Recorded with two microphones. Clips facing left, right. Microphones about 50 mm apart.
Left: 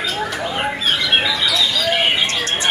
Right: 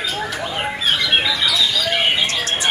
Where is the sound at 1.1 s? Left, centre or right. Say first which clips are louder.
Left 1 dB; centre.